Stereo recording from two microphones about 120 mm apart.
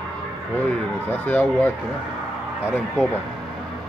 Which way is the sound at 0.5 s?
10° left (ahead or behind).